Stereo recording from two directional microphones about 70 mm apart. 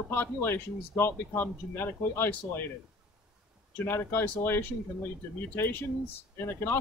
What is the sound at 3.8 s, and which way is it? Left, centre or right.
Speech, left.